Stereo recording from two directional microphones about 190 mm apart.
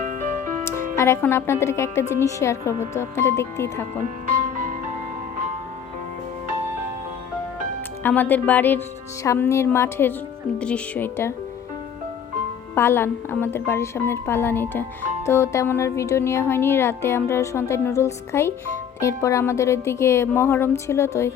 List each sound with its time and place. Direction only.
0.0 s music: 40° right (ahead or behind)
0.6 s speech: 15° left (ahead or behind)
4.4 s music: 40° right (ahead or behind)
8.0 s speech: 10° left (ahead or behind)
12.7 s speech: 10° left (ahead or behind)